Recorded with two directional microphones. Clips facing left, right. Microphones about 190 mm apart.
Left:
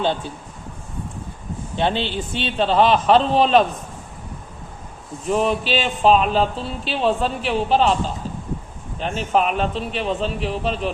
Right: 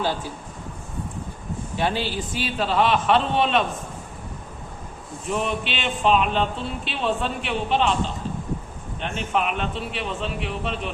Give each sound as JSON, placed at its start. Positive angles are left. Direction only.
{"t": 1.7, "sound": "a man's voice", "side_deg": 25}
{"t": 5.3, "sound": "a man's voice", "side_deg": 35}